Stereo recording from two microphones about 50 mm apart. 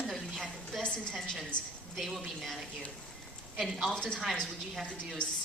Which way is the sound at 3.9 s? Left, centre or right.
Centre.